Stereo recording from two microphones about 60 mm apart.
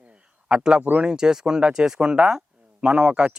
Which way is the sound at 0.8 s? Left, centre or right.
Right.